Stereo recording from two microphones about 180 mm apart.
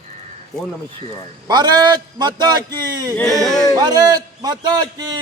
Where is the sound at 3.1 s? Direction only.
Centre (ahead or behind).